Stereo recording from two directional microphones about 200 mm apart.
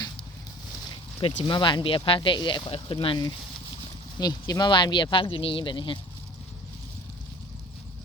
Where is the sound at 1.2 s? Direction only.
25° left (ahead or behind).